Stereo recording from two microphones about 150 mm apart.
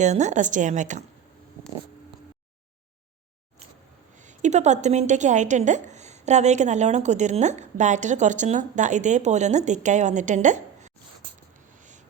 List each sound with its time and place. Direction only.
0.0 s a woman's voice: 50° right (ahead or behind)
4.2 s a woman's voice: 50° right (ahead or behind)